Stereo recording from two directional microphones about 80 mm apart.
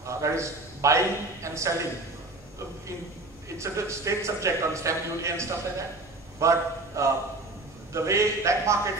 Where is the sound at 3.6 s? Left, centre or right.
Right.